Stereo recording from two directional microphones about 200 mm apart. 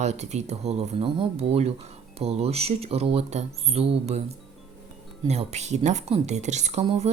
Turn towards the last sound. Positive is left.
turn(degrees=-30)  # may be behind; listen again after turning